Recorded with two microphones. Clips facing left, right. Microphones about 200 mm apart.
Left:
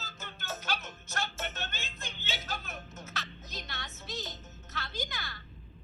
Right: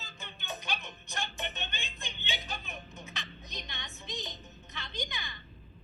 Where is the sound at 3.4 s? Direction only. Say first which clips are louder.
Left 1 dB; 5° left (ahead or behind).